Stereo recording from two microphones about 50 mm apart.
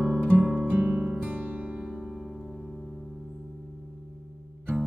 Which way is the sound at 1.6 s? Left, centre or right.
Centre.